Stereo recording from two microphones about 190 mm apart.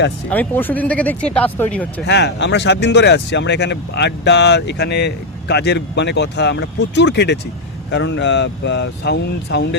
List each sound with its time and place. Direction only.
0.3 s speech: 10° left (ahead or behind)
2.0 s speech: 65° left (ahead or behind)